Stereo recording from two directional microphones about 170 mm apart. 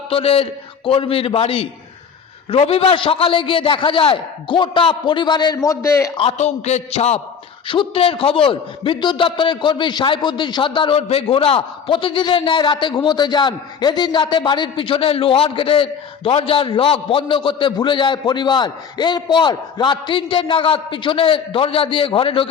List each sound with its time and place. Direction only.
0.1 s a man's voice: 35° left (ahead or behind); by 6.1 s 15° left (ahead or behind)
6.1 s a man's voice: 40° left (ahead or behind)